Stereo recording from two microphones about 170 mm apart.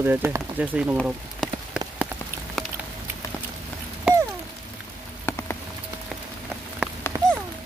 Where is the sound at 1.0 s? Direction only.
5° right (ahead or behind).